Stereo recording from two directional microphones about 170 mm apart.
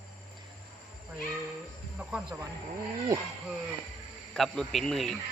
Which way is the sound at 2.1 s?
5° right (ahead or behind).